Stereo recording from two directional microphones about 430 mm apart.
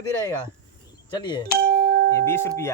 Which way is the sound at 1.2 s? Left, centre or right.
Centre.